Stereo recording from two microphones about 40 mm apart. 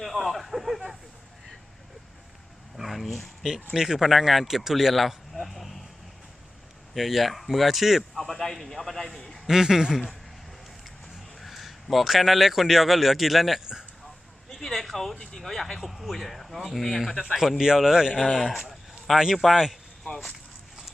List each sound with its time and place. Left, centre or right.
0.0 s a sound: centre
2.7 s a sound: centre
3.8 s speech: centre
6.9 s speech: centre
8.2 s a man's voice: centre
9.5 s speech: centre
11.3 s a man's voice: centre
14.6 s a sound: centre
15.1 s speech: centre
15.4 s speech: centre
17.3 s speech: centre